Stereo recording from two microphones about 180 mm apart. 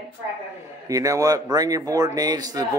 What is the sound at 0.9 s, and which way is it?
Speech, 20° right (ahead or behind).